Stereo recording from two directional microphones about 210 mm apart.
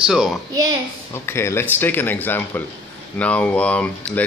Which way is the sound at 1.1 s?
10° left (ahead or behind).